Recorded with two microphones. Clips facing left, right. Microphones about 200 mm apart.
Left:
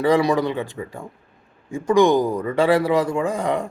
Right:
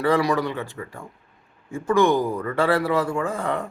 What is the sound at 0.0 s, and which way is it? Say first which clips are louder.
Speech: left 3 dB; 15° left (ahead or behind).